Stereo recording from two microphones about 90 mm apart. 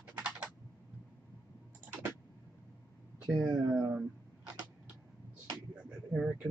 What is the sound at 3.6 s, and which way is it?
Speech, 35° right (ahead or behind).